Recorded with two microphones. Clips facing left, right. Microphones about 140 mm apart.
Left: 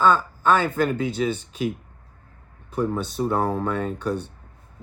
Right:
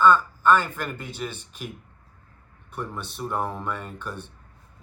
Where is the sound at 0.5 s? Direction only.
75° left (ahead or behind).